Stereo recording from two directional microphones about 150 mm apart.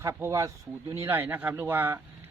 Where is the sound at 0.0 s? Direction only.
20° right (ahead or behind).